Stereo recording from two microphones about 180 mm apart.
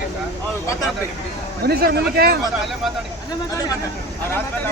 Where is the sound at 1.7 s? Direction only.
60° right (ahead or behind).